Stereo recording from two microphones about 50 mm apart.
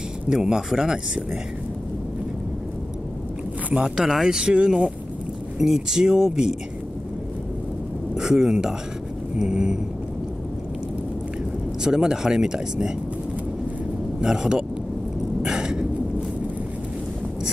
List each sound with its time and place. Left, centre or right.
0.3 s speech: centre
3.8 s speech: centre
8.2 s speech: centre
11.8 s speech: centre
14.2 s speech: centre
15.4 s a sound: centre